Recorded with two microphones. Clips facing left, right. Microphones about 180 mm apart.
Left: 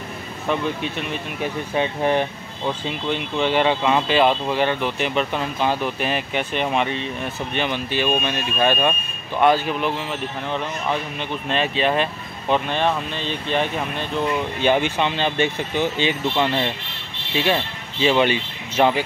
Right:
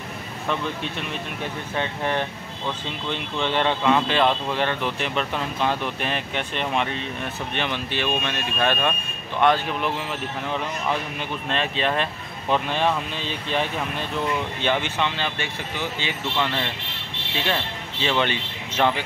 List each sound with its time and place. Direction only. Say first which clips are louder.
1.4 s speech: left 6 dB; 15° left (ahead or behind); by 13.7 s 5° right (ahead or behind)
14.6 s speech: left 6 dB; 15° left (ahead or behind)
18.0 s speech: left 6 dB; 10° left (ahead or behind)